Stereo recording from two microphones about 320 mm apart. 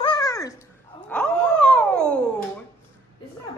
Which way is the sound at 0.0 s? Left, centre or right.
Centre.